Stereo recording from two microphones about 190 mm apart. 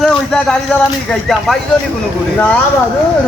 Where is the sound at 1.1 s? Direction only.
Centre (ahead or behind).